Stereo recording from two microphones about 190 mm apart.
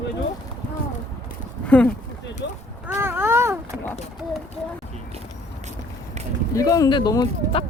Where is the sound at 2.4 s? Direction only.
65° left (ahead or behind).